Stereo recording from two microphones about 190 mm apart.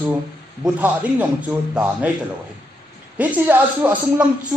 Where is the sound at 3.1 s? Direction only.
10° right (ahead or behind).